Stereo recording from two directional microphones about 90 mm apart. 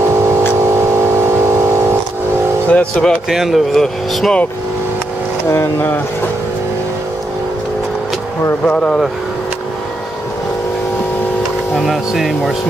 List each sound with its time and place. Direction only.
0.6 s vehicle: 30° right (ahead or behind)
2.7 s speech: 10° left (ahead or behind)
3.3 s speech: 5° right (ahead or behind)
5.5 s speech: 25° left (ahead or behind)
8.6 s speech: 10° left (ahead or behind)
11.7 s speech: centre (ahead or behind)